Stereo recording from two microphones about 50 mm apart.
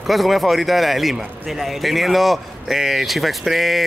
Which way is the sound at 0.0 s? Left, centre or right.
Centre.